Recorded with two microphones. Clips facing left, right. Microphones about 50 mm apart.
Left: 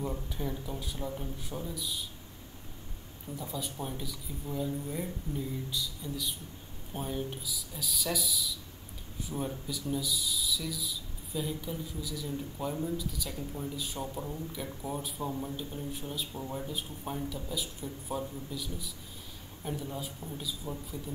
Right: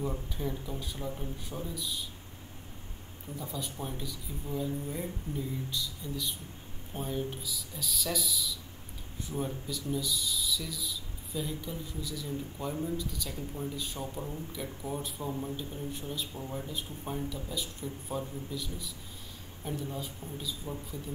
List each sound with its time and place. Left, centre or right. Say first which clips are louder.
0.0 s speech: right 1 dB; centre
3.3 s speech: left 1 dB; right
3.8 s speech: even; centre